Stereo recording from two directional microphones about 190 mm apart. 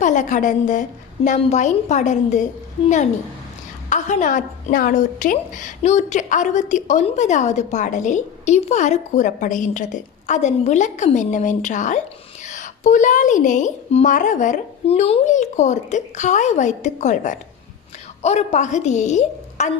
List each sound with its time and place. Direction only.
0.0 s a woman's voice: 40° left (ahead or behind)